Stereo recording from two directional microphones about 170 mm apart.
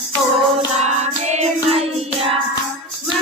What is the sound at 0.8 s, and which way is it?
Music, 40° right (ahead or behind).